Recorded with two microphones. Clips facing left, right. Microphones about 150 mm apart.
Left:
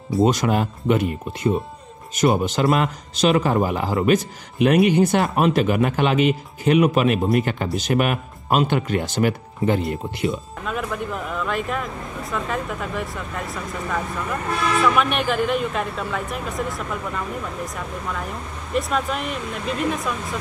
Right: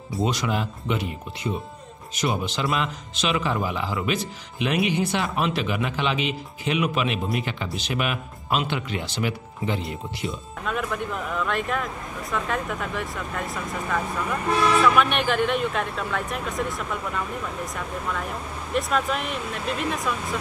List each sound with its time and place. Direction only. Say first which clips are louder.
0.2 s speech: left 7 dB; 45° left (ahead or behind)
9.8 s speech: left 7 dB; centre (ahead or behind)
14.8 s speech: even; centre (ahead or behind)